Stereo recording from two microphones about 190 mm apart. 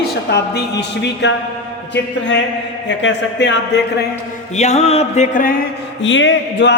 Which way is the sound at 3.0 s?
70° left (ahead or behind).